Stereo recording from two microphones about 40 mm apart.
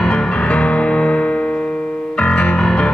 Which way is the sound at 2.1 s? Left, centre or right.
Centre.